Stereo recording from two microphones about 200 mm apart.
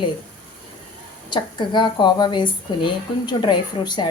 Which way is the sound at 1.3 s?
25° left (ahead or behind).